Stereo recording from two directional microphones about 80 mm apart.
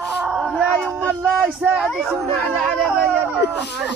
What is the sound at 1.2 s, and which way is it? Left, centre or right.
Speech, centre.